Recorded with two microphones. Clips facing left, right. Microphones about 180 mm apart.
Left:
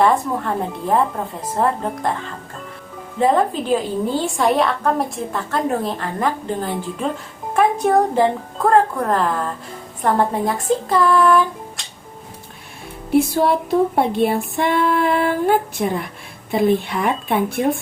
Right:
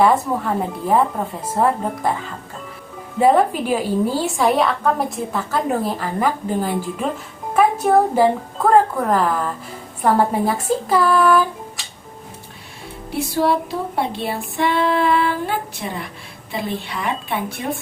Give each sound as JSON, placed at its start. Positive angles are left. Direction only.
{"t": 0.0, "sound": "a woman's voice", "side_deg": -5}
{"t": 13.1, "sound": "music", "side_deg": 50}